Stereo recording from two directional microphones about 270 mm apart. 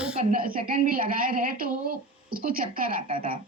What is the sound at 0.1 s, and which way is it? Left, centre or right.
A woman's voice, right.